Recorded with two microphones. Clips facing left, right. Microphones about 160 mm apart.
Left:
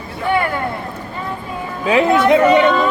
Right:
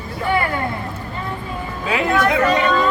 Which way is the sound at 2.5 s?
25° left (ahead or behind).